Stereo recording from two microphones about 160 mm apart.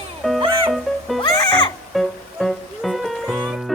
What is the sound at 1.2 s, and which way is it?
Music, 25° left (ahead or behind).